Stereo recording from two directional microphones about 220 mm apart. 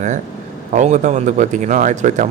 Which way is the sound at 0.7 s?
35° right (ahead or behind).